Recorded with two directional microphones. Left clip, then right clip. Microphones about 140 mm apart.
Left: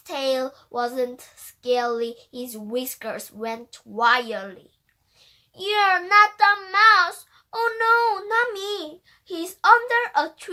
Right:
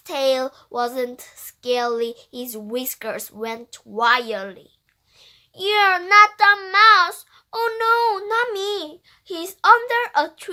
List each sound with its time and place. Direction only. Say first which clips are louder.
0.0 s child singing: right 4 dB; 40° right (ahead or behind)
5.5 s child singing: right 3 dB; 35° right (ahead or behind)